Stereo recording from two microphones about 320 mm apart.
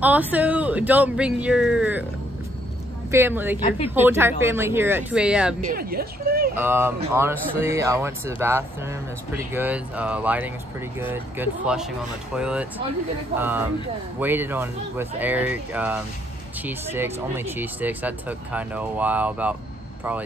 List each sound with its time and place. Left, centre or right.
0.0 s speech: centre
3.1 s speech: centre
3.5 s a woman's voice: centre
3.9 s speech: centre
5.7 s speech: right
6.6 s speech: centre